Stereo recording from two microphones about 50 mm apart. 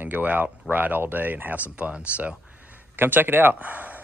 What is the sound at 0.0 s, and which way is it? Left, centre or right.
Speech, right.